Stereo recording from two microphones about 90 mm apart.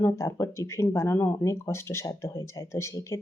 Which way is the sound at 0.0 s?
30° left (ahead or behind).